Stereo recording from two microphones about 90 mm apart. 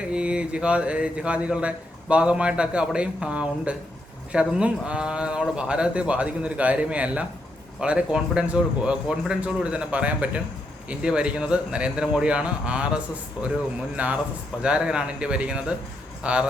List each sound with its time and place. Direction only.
0.0 s speech: 10° right (ahead or behind)
13.9 s speech: 15° right (ahead or behind)